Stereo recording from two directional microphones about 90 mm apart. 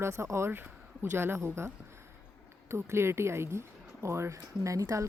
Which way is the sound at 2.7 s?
30° right (ahead or behind).